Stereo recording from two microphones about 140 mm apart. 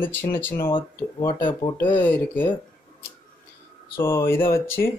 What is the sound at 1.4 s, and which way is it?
Speech, 30° left (ahead or behind).